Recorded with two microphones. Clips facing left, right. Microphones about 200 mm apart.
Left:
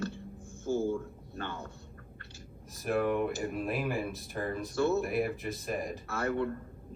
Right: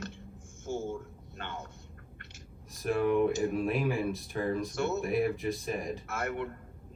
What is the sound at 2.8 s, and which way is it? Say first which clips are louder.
Speech: right 3 dB; centre (ahead or behind).